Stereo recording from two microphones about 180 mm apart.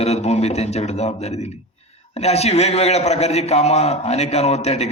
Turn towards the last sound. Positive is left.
turn(degrees=35)  # may be behind; listen again after turning